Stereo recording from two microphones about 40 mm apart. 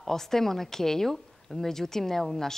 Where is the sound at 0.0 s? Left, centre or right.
Centre.